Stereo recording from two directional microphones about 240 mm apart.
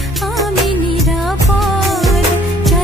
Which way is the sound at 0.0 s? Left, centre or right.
Centre.